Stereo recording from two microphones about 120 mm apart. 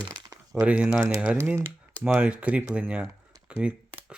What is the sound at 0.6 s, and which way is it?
Speech, 10° right (ahead or behind).